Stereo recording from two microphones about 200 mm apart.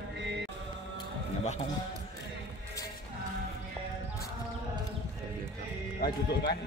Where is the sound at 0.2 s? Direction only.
60° right (ahead or behind).